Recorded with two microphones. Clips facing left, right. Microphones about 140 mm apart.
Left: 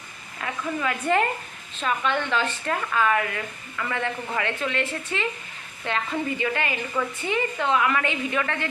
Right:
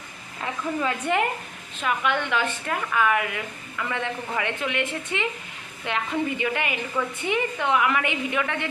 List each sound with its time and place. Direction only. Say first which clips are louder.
0.4 s a woman's voice: right 1 dB; 25° right (ahead or behind)